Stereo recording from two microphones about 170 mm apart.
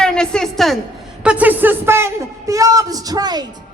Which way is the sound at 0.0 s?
5° left (ahead or behind).